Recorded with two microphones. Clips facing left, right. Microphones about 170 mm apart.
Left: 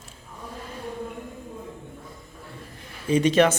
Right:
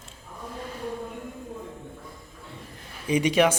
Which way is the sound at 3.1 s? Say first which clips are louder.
Left 2 dB; 10° right (ahead or behind).